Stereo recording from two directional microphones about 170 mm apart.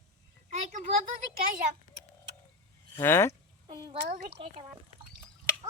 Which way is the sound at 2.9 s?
15° left (ahead or behind).